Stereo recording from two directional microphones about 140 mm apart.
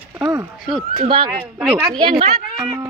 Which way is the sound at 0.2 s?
25° right (ahead or behind).